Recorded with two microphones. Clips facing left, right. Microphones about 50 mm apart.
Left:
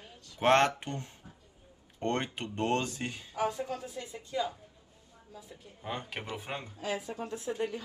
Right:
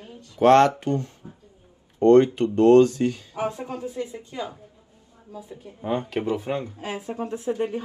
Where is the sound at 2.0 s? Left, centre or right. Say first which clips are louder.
Right 17 dB; left.